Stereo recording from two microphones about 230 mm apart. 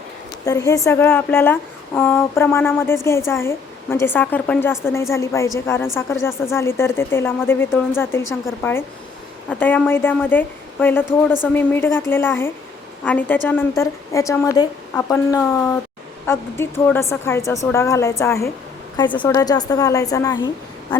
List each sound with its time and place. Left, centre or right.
0.4 s speech: centre